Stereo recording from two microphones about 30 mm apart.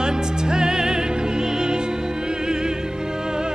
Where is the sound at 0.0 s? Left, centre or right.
Right.